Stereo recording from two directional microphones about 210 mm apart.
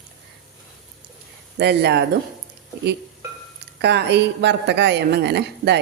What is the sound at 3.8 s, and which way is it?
A woman's voice, 55° right (ahead or behind).